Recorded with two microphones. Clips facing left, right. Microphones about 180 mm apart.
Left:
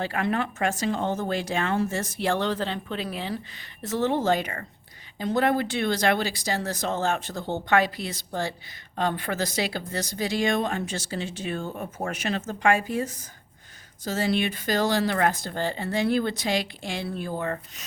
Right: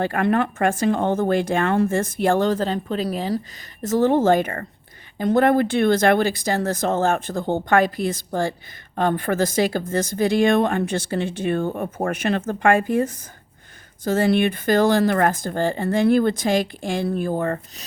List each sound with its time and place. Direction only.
0.0 s speech: 55° right (ahead or behind)